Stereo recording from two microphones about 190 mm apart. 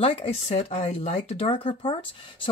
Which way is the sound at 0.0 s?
30° left (ahead or behind).